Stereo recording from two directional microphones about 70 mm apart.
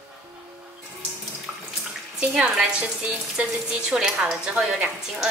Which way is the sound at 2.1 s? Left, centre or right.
Centre.